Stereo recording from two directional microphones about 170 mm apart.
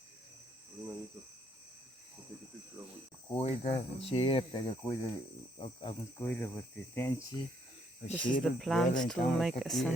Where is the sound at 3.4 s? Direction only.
35° left (ahead or behind).